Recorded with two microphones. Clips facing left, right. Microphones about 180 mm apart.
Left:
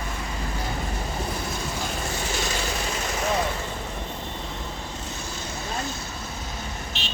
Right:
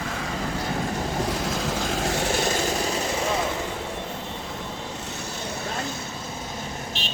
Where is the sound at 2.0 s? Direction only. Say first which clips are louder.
Right 5 dB; 70° right (ahead or behind).